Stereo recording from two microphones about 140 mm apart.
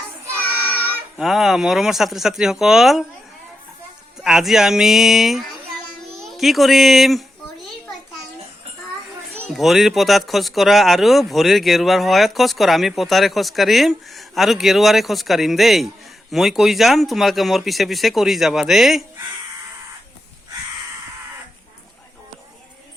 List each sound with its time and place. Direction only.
1.2 s speech: centre (ahead or behind)
4.2 s speech: 5° right (ahead or behind)
9.5 s speech: centre (ahead or behind)